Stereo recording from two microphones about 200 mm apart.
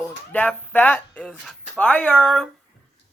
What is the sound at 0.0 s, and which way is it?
Speech, 10° left (ahead or behind).